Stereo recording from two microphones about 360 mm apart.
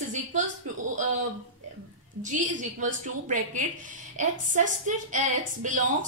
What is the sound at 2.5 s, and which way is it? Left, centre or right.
A woman's voice, right.